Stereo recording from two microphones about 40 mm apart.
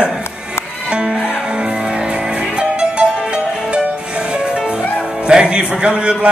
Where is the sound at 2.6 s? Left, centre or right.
Right.